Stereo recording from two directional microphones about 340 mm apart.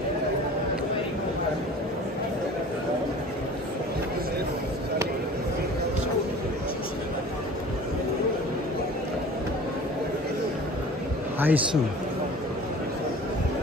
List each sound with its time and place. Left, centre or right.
11.3 s a man's voice: centre